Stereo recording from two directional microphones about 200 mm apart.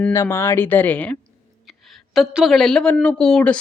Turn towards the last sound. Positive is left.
turn(degrees=5)  # may be behind; listen again after turning